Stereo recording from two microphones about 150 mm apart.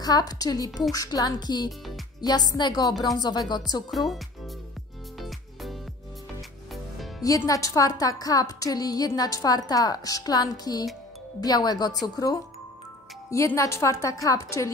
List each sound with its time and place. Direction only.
0.0 s a woman's voice: 25° left (ahead or behind)
5.2 s music: centre (ahead or behind)
7.2 s a woman's voice: 20° left (ahead or behind)